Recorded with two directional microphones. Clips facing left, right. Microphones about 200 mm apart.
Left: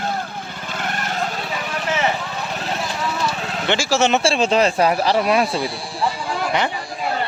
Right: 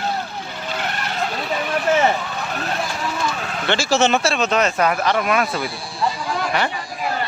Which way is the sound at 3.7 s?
10° left (ahead or behind).